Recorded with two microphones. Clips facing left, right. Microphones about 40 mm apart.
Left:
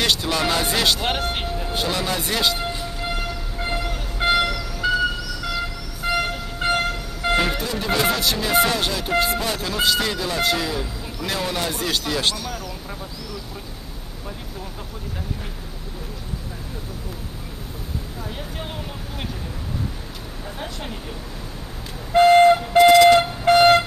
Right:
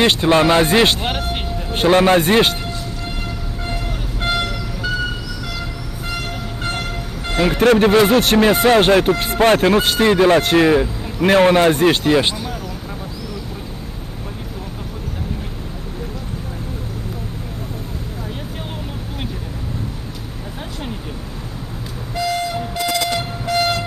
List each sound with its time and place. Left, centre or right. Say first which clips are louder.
0.0 s speech: right 8 dB; right
1.0 s speech: right 1 dB; centre
1.7 s speech: right 13 dB; right
4.2 s vehicle: left 2 dB; centre
6.0 s train: left 4 dB; centre
7.5 s speech: right 14 dB; right
7.9 s speech: right 8 dB; right
12.3 s speech: right 2 dB; centre
22.1 s vehicle: left 9 dB; left